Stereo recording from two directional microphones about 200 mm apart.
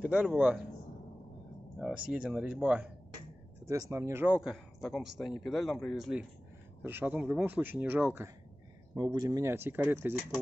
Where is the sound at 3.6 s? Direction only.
15° right (ahead or behind).